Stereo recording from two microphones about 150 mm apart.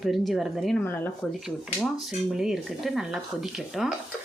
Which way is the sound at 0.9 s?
10° left (ahead or behind).